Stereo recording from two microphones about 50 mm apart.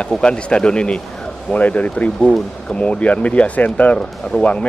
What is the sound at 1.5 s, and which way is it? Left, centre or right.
Speech, left.